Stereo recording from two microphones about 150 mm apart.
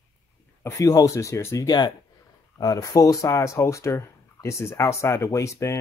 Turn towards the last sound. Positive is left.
turn(degrees=20)  # may be behind; listen again after turning